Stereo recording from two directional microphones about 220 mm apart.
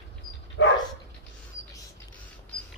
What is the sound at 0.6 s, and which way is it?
Dog, 60° left (ahead or behind).